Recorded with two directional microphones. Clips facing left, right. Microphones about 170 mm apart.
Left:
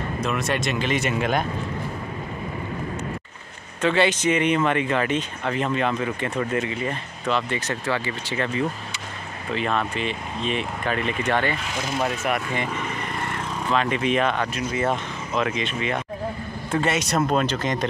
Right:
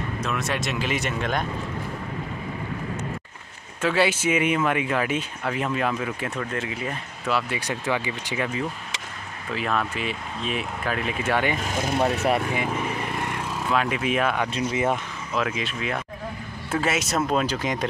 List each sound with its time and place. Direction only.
0.2 s speech: centre (ahead or behind)
3.8 s speech: 5° right (ahead or behind)
11.6 s speech: 50° right (ahead or behind)
12.5 s vehicle: 10° right (ahead or behind)
14.5 s speech: 20° right (ahead or behind)
15.3 s speech: 5° right (ahead or behind)